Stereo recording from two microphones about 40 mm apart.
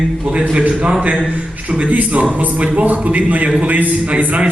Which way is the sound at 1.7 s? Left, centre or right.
Right.